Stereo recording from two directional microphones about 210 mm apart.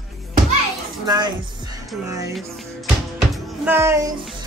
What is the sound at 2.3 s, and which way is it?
Music, centre (ahead or behind).